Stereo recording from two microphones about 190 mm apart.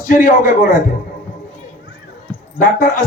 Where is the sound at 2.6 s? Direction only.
45° left (ahead or behind).